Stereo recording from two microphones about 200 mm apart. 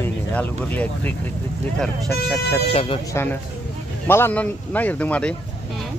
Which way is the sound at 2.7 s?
30° left (ahead or behind).